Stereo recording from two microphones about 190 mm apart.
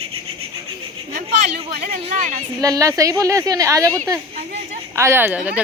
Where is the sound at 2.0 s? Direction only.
40° right (ahead or behind).